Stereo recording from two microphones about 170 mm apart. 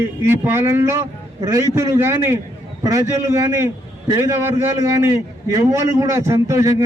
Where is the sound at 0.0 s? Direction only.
15° right (ahead or behind).